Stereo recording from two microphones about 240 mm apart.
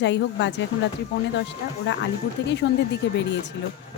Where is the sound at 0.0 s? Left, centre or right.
Left.